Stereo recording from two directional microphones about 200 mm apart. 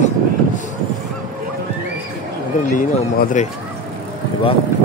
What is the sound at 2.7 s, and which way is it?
Speech, 40° left (ahead or behind).